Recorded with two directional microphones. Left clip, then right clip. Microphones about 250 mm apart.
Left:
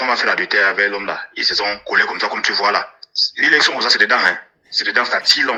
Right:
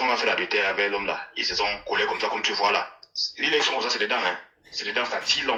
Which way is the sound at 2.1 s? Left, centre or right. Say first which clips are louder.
Left 7 dB; centre.